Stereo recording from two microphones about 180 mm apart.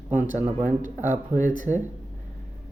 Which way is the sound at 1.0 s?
45° right (ahead or behind).